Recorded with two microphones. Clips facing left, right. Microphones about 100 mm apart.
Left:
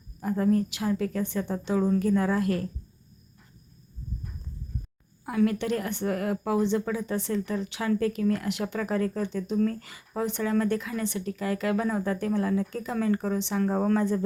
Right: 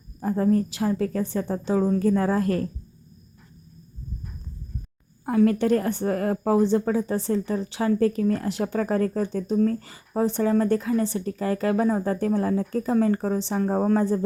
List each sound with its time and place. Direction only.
0.2 s a woman's voice: 35° right (ahead or behind)
5.2 s a woman's voice: 40° right (ahead or behind)